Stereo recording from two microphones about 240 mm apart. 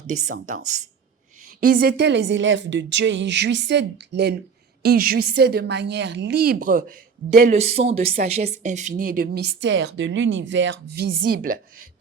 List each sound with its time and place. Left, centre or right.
0.3 s a woman's voice: right